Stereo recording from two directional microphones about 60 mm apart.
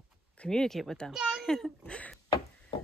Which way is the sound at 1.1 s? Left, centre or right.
Centre.